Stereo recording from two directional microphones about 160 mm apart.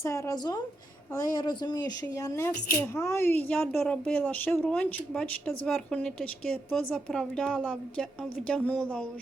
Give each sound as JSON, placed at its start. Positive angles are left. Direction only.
{"t": 0.0, "sound": "a woman's voice", "side_deg": 20}